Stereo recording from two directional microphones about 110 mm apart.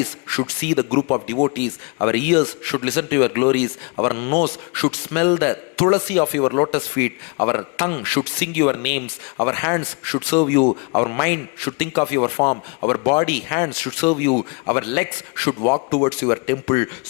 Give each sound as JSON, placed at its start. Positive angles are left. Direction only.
{"t": 0.0, "sound": "a man's voice", "side_deg": 20}